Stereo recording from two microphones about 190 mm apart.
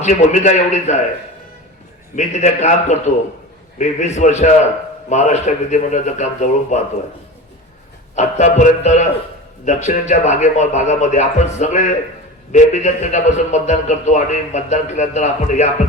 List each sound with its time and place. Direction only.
0.0 s a man's voice: 40° left (ahead or behind)
2.1 s a man's voice: 35° left (ahead or behind)
8.1 s a man's voice: 40° left (ahead or behind)